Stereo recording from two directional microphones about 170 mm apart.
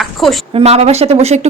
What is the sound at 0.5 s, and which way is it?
Speech, 40° right (ahead or behind).